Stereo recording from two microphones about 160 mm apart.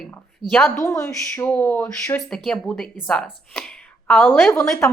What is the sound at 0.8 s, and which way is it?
Speech, 15° left (ahead or behind).